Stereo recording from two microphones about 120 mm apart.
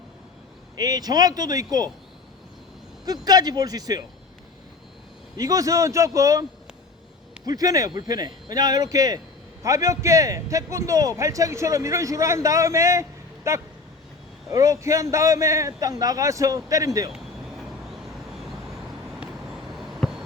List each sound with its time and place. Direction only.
0.8 s speech: 30° right (ahead or behind)
3.1 s speech: 35° right (ahead or behind)
5.4 s a man's voice: 30° right (ahead or behind)
7.4 s a man's voice: 30° right (ahead or behind)
20.0 s a sound: 5° right (ahead or behind)